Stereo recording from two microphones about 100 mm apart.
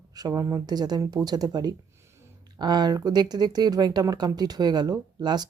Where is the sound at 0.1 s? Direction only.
40° right (ahead or behind).